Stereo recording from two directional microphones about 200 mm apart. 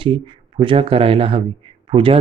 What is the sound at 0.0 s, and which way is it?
Speech, 25° right (ahead or behind).